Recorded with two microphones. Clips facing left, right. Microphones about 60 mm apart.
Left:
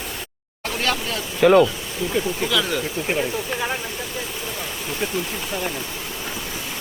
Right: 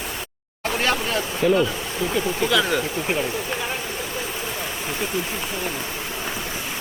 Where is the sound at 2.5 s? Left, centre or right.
Centre.